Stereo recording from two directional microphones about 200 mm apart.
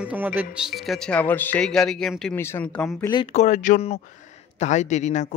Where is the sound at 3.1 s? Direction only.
30° left (ahead or behind).